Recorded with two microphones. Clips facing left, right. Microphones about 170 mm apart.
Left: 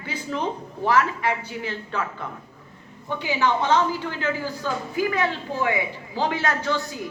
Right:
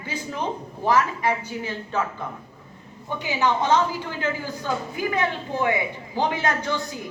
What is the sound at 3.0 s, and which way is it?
Speech, 15° right (ahead or behind).